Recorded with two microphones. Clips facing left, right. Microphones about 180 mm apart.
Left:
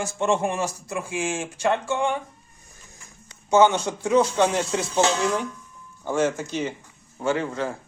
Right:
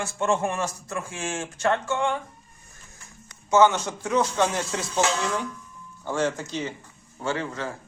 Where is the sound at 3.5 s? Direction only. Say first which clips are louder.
Left 1 dB; 15° left (ahead or behind).